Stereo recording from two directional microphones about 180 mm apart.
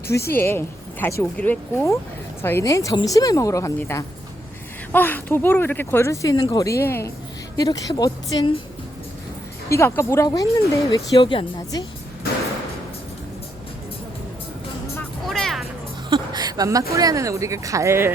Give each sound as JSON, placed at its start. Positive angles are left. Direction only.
{"t": 0.3, "sound": "speech", "side_deg": 10}
{"t": 9.6, "sound": "speech", "side_deg": 15}
{"t": 15.3, "sound": "music", "side_deg": 0}
{"t": 16.0, "sound": "a sound", "side_deg": -25}
{"t": 16.9, "sound": "speech", "side_deg": -20}